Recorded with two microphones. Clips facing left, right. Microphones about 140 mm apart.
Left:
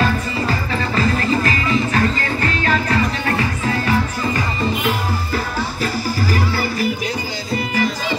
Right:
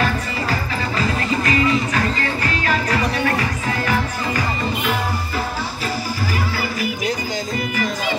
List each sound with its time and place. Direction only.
0.9 s music: 35° left (ahead or behind)